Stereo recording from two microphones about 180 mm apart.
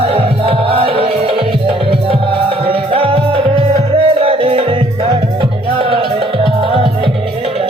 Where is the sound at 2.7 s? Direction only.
30° right (ahead or behind).